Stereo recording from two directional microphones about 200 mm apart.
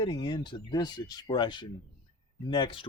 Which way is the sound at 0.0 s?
20° left (ahead or behind).